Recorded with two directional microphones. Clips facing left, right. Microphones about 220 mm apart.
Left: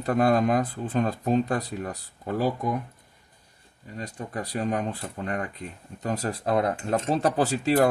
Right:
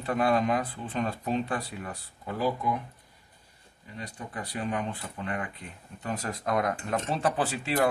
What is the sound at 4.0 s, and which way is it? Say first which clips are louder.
Speech: left 5 dB; 40° left (ahead or behind).